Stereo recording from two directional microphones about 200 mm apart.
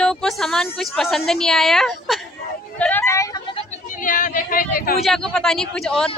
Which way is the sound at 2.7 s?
10° left (ahead or behind).